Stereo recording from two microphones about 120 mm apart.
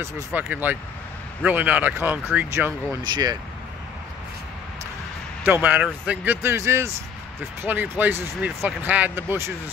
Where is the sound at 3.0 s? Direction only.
35° right (ahead or behind).